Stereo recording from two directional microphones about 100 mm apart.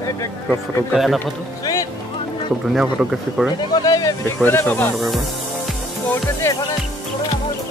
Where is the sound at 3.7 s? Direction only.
40° left (ahead or behind).